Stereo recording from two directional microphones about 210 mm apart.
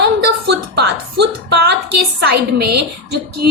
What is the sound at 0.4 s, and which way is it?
Music, 50° right (ahead or behind).